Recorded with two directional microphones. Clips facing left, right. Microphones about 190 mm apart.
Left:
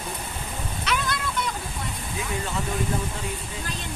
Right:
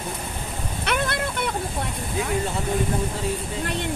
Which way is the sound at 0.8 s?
60° right (ahead or behind).